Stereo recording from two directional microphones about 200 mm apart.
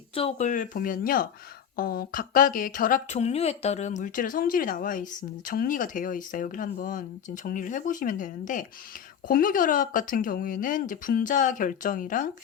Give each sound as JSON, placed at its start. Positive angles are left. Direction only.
{"t": 0.1, "sound": "speech", "side_deg": 30}